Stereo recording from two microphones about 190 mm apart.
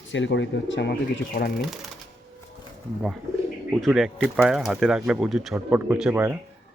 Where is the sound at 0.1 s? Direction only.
75° left (ahead or behind).